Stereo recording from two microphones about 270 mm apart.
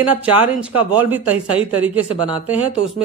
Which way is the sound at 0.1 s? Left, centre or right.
Centre.